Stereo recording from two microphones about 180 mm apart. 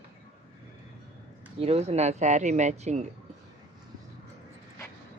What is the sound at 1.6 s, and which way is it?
Speech, 35° right (ahead or behind).